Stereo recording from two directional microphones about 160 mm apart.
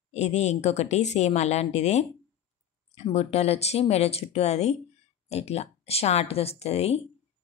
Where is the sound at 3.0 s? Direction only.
40° left (ahead or behind).